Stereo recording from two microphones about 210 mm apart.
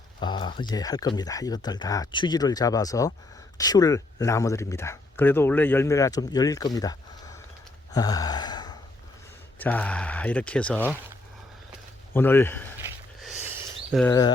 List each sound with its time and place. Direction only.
0.2 s speech: 20° left (ahead or behind)
7.9 s gasp: 20° left (ahead or behind)
9.6 s speech: 10° left (ahead or behind)
12.1 s speech: 10° left (ahead or behind)
13.4 s a sound: 10° right (ahead or behind)
13.9 s speech: 5° right (ahead or behind)